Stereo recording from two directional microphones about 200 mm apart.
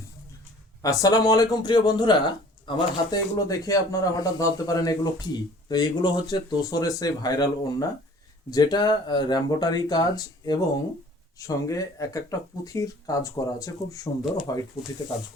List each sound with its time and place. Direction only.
0.8 s speech: 15° left (ahead or behind)